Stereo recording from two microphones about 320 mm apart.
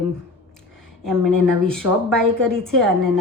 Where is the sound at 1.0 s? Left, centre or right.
Centre.